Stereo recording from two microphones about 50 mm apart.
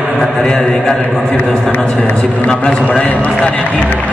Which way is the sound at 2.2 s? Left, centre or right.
Centre.